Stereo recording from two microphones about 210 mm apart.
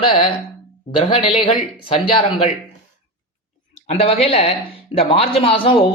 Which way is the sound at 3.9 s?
30° left (ahead or behind).